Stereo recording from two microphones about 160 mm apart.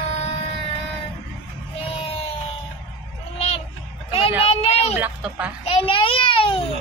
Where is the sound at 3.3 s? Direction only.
40° left (ahead or behind).